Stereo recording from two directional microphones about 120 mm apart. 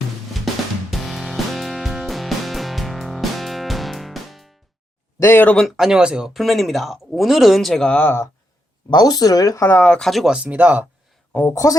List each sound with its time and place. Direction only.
0.9 s music: centre (ahead or behind)
5.2 s speech: 15° left (ahead or behind)
5.6 s speech: 5° right (ahead or behind); by 8.3 s 20° left (ahead or behind)
8.9 s speech: 35° left (ahead or behind)
9.9 s speech: 5° left (ahead or behind); by 10.8 s 15° right (ahead or behind)
11.3 s speech: 15° left (ahead or behind)